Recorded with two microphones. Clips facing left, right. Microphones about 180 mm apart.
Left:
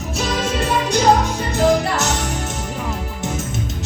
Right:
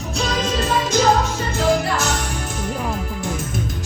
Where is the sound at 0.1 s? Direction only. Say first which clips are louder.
Left 1 dB; 10° left (ahead or behind).